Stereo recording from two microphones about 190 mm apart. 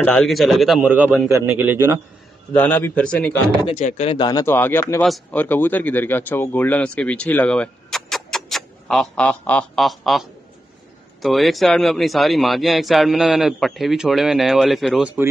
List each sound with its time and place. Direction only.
0.0 s a man's voice: 5° left (ahead or behind); by 2.0 s 15° right (ahead or behind)
2.5 s a man's voice: 10° left (ahead or behind)
3.6 s speech: 35° left (ahead or behind); by 10.2 s centre (ahead or behind)
11.2 s a man's voice: centre (ahead or behind)